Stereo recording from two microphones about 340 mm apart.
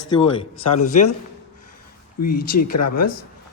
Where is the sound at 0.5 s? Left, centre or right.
Left.